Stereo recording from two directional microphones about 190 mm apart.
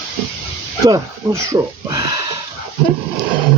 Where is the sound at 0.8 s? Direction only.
20° right (ahead or behind).